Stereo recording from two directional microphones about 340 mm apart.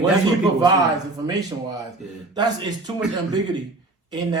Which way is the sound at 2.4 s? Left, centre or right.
Centre.